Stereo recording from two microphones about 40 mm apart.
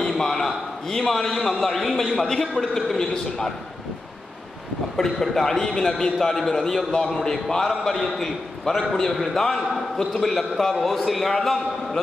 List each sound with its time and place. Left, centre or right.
0.2 s a sound: centre
0.8 s a man's voice: centre
4.9 s a man's voice: centre